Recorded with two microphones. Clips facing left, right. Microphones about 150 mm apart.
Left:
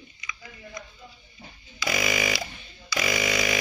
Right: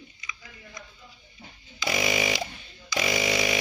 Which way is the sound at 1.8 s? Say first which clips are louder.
Right 1 dB; 25° right (ahead or behind).